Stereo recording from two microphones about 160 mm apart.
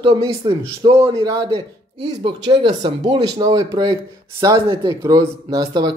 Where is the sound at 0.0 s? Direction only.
30° right (ahead or behind).